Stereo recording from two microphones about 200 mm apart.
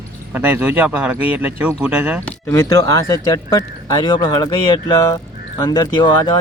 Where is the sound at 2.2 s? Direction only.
10° left (ahead or behind).